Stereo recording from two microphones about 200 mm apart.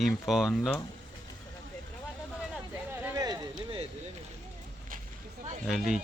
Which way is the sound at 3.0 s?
20° right (ahead or behind).